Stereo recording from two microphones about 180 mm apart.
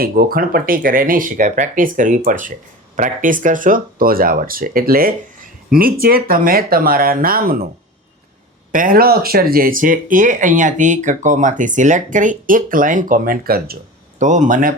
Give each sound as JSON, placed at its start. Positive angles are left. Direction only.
{"t": 0.0, "sound": "speech", "side_deg": -55}
{"t": 8.7, "sound": "speech", "side_deg": -50}
{"t": 14.2, "sound": "speech", "side_deg": -45}